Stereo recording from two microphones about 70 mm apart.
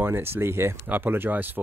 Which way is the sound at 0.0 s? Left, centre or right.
Right.